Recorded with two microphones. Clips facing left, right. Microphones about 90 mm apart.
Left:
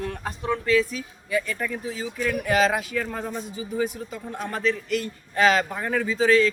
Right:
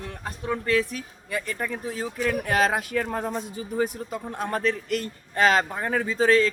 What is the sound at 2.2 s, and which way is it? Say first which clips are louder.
A man's voice: left 1 dB; 40° right (ahead or behind).